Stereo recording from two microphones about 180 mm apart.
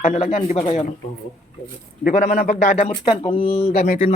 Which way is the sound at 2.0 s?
45° left (ahead or behind).